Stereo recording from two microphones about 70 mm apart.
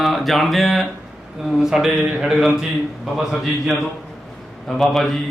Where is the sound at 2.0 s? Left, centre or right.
Right.